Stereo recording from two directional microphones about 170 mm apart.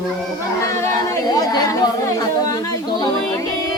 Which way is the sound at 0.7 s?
20° left (ahead or behind).